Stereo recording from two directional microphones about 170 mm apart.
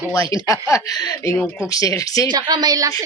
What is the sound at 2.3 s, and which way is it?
Speech, 25° right (ahead or behind).